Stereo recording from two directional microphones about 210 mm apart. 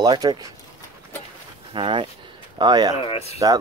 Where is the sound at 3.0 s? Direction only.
30° left (ahead or behind).